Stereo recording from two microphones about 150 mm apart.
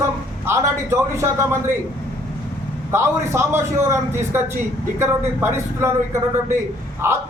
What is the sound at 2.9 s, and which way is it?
A man's voice, 15° right (ahead or behind).